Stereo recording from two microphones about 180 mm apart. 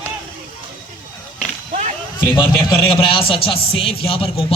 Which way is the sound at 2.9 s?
30° left (ahead or behind).